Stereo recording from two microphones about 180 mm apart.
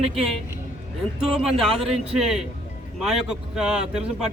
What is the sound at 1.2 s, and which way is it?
Speech, centre (ahead or behind).